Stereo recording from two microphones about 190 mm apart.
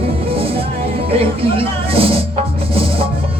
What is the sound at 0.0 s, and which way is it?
Music, 30° right (ahead or behind).